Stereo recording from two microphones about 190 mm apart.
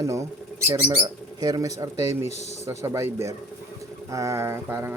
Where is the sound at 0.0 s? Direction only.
15° right (ahead or behind).